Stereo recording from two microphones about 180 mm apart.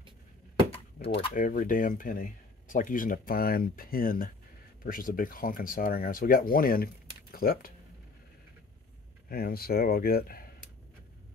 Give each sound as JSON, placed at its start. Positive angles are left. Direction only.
{"t": 1.3, "sound": "speech", "side_deg": 50}
{"t": 9.3, "sound": "speech", "side_deg": 55}